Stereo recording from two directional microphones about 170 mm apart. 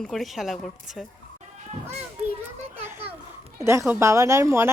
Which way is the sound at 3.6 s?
15° right (ahead or behind).